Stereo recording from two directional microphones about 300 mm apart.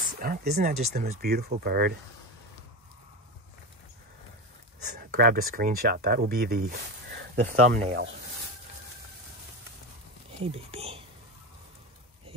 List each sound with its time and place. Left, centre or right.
0.2 s speech: right
4.9 s speech: right
10.4 s speech: centre